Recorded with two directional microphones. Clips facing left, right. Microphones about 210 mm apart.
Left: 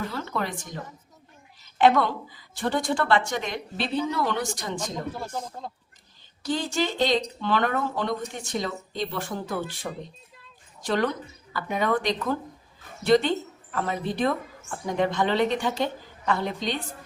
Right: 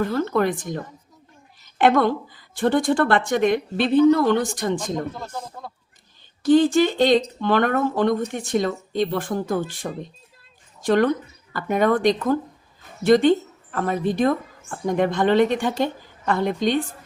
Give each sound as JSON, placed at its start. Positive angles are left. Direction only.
{"t": 0.0, "sound": "speech", "side_deg": -50}
{"t": 1.8, "sound": "speech", "side_deg": -50}
{"t": 6.4, "sound": "speech", "side_deg": -55}
{"t": 10.8, "sound": "speech", "side_deg": -50}